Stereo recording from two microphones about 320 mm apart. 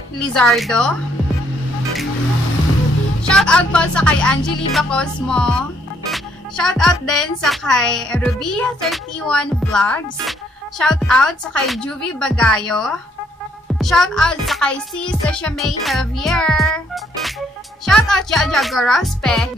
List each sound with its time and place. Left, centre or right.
0.3 s speech: centre
3.3 s speech: centre